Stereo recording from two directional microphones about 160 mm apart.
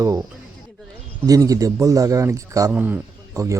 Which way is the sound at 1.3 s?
20° right (ahead or behind).